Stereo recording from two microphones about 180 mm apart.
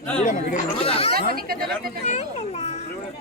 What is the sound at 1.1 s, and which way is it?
Speech, 55° right (ahead or behind).